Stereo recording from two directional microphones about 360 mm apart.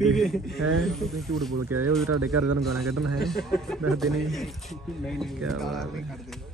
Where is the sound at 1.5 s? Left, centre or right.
Right.